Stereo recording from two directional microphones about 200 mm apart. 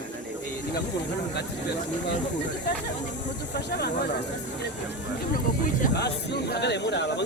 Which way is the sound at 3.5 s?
55° left (ahead or behind).